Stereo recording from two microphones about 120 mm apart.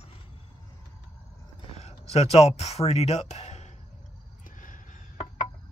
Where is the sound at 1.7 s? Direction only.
60° left (ahead or behind).